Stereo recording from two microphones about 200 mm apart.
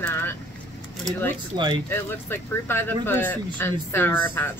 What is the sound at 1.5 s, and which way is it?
Speech, 25° right (ahead or behind).